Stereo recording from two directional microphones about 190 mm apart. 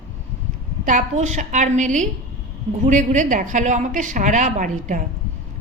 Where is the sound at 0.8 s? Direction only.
40° right (ahead or behind).